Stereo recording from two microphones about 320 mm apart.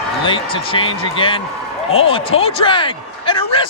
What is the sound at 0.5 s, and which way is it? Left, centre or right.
Speech, centre.